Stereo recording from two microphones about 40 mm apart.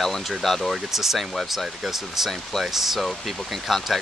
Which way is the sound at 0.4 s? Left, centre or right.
Centre.